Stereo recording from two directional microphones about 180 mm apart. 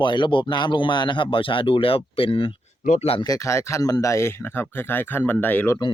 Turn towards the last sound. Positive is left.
turn(degrees=10)  # may be behind; listen again after turning